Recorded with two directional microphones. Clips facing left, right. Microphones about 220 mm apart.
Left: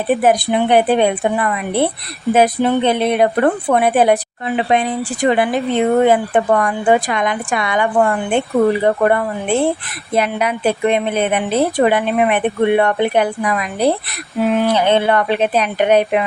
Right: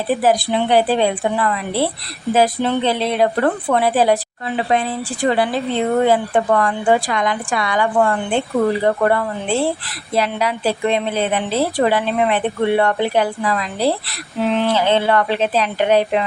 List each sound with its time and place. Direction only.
0.1 s speech: 20° left (ahead or behind)